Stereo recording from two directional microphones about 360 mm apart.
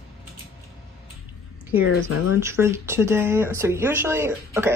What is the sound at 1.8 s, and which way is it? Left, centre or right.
Speech, left.